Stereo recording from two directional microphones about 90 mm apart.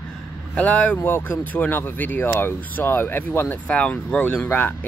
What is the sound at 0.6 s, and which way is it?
Speech, 15° left (ahead or behind).